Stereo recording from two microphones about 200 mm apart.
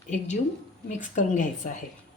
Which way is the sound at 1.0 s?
40° left (ahead or behind).